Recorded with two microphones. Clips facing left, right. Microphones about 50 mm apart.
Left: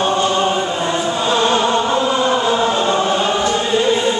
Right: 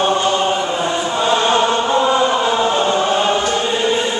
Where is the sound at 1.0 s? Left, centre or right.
Centre.